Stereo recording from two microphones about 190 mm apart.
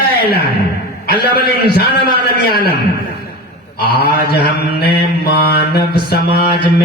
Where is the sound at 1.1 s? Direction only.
55° left (ahead or behind).